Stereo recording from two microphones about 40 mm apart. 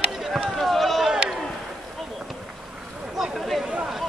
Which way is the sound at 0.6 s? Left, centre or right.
Centre.